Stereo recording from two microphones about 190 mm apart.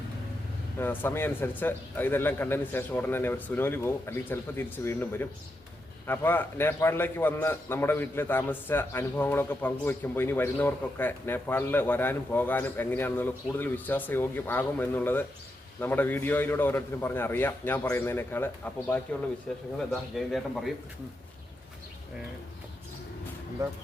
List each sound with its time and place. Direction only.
0.8 s a man's voice: 10° left (ahead or behind)
23.6 s speech: 15° right (ahead or behind)